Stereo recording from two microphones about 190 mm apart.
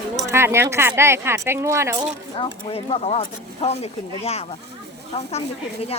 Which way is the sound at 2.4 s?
30° left (ahead or behind).